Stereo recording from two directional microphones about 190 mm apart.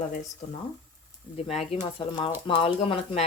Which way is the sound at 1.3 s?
35° left (ahead or behind).